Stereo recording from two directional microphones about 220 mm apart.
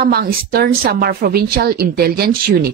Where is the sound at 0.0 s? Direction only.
45° right (ahead or behind).